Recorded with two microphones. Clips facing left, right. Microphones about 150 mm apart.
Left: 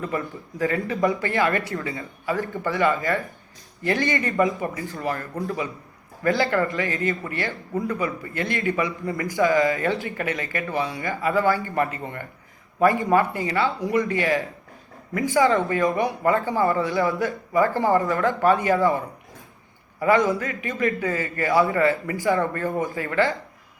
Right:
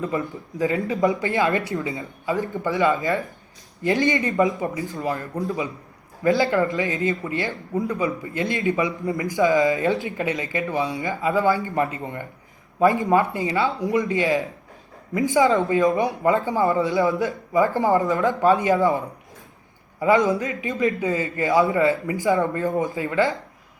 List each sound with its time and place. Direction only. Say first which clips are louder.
0.0 s a man's voice: right 2 dB; 15° right (ahead or behind)